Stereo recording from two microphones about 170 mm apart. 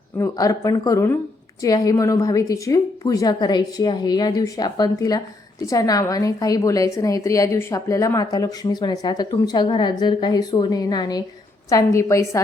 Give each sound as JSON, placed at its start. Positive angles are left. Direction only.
{"t": 0.2, "sound": "a woman's voice", "side_deg": 20}